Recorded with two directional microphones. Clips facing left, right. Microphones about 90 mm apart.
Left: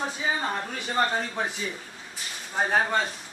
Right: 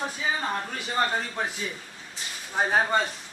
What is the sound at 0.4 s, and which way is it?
Speech, 5° left (ahead or behind).